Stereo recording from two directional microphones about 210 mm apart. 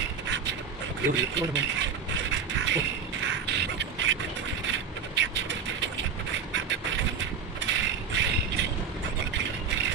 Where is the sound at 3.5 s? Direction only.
55° right (ahead or behind).